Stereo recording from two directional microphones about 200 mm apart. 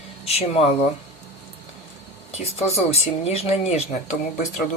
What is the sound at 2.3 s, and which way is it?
Speech, 30° left (ahead or behind).